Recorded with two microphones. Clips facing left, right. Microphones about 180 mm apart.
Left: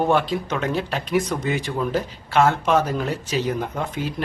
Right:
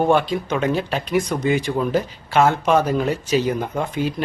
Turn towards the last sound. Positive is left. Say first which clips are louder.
# right 4 dB
turn(degrees=0)  # may be behind; listen again after turning